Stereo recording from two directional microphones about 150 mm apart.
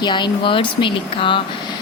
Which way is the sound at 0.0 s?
30° left (ahead or behind).